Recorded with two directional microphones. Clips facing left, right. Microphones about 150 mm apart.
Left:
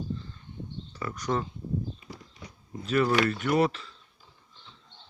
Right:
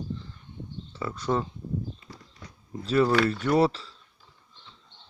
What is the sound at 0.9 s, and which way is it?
Speech, 25° right (ahead or behind).